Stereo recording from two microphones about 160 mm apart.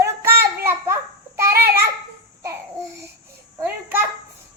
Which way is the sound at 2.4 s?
20° right (ahead or behind).